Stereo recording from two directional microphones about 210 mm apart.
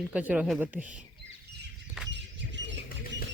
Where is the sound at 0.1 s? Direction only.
5° right (ahead or behind).